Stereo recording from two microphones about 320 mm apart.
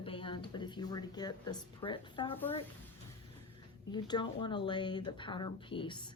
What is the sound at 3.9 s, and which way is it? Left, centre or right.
A woman's voice, centre.